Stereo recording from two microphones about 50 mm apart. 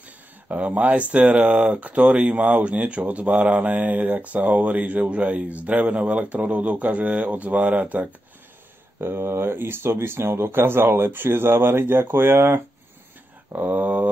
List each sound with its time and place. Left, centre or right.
0.5 s speech: right
9.0 s speech: right
13.7 s speech: right